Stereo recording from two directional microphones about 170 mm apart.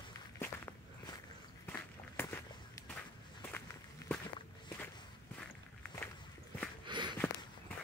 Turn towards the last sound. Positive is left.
turn(degrees=-25)  # may be behind; listen again after turning